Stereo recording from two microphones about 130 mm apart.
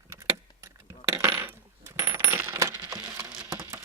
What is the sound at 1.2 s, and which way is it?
Coin, 20° right (ahead or behind).